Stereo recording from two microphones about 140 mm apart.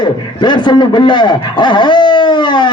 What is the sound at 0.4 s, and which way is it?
Speech, 35° left (ahead or behind).